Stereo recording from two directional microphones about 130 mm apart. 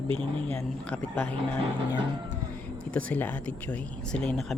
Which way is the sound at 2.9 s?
10° left (ahead or behind).